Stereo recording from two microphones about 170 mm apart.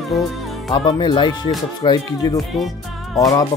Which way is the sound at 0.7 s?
25° left (ahead or behind).